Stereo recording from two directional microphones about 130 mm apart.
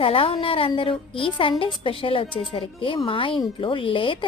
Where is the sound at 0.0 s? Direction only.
45° left (ahead or behind).